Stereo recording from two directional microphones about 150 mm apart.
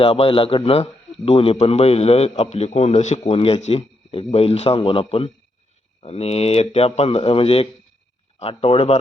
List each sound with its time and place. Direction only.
0.0 s a man's voice: 35° left (ahead or behind)